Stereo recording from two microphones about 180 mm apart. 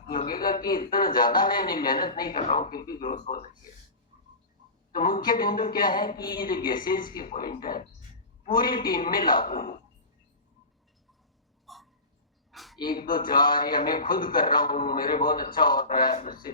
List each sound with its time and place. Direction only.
0.3 s a man's voice: 55° left (ahead or behind)
4.9 s a man's voice: 50° left (ahead or behind)
11.6 s hiccup: centre (ahead or behind)
12.5 s a sound: centre (ahead or behind)
12.8 s a man's voice: 55° left (ahead or behind)